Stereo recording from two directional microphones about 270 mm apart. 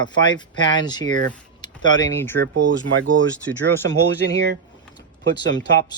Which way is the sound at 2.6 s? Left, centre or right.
Right.